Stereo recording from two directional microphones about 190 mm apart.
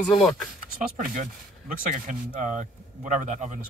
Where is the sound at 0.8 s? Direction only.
45° right (ahead or behind).